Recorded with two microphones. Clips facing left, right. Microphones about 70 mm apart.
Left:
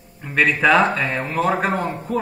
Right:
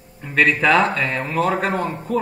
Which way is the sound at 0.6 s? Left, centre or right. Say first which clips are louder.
Left 1 dB; centre.